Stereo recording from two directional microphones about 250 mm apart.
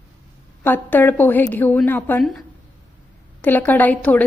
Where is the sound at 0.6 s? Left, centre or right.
Centre.